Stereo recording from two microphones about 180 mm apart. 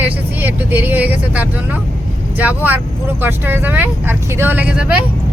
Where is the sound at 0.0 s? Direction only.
10° right (ahead or behind).